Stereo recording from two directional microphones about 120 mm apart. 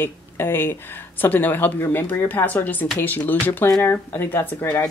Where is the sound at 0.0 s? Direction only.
20° left (ahead or behind).